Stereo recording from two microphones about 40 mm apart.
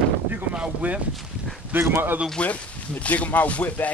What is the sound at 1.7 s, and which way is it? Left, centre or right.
Speech, right.